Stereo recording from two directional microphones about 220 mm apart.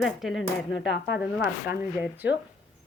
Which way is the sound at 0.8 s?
50° left (ahead or behind).